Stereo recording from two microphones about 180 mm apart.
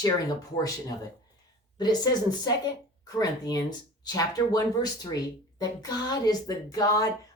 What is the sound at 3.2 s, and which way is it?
Speech, 20° left (ahead or behind).